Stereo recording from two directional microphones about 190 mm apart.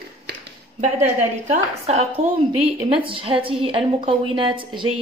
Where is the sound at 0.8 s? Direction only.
35° right (ahead or behind).